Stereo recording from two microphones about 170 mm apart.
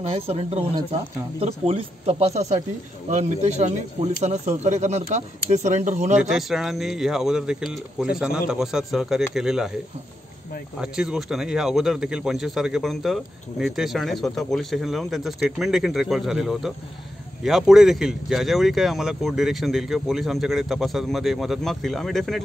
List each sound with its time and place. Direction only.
0.0 s speech: 35° right (ahead or behind)
6.1 s speech: 5° right (ahead or behind)
10.8 s speech: 5° right (ahead or behind)